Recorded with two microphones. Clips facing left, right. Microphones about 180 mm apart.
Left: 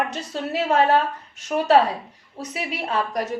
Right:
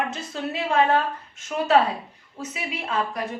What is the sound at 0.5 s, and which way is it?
A woman's voice, 40° left (ahead or behind).